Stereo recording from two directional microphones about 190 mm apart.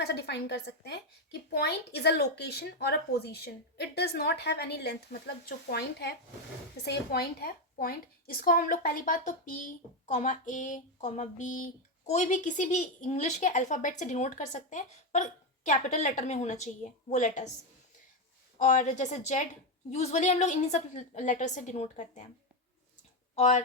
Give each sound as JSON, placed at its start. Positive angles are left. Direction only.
{"t": 0.0, "sound": "a woman's voice", "side_deg": 60}
{"t": 18.6, "sound": "a woman's voice", "side_deg": 40}
{"t": 23.3, "sound": "speech", "side_deg": 40}